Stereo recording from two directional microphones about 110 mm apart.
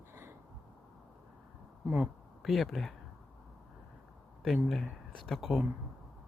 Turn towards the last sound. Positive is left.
turn(degrees=0)  # may be behind; listen again after turning